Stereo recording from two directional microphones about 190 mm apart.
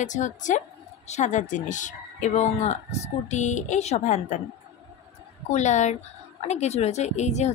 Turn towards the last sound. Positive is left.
turn(degrees=35)  # may be behind; listen again after turning